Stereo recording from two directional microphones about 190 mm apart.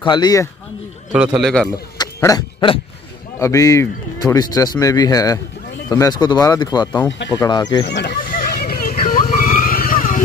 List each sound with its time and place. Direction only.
0.0 s speech: 20° left (ahead or behind)
1.1 s a man's voice: 5° right (ahead or behind)
2.0 s a sound: 20° left (ahead or behind)
3.3 s speech: 15° left (ahead or behind)
7.8 s vehicle: 65° left (ahead or behind); by 10.2 s 45° left (ahead or behind)